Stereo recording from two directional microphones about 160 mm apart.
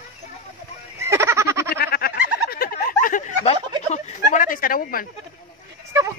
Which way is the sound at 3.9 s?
50° left (ahead or behind).